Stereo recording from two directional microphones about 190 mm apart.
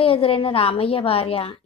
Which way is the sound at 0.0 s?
30° left (ahead or behind).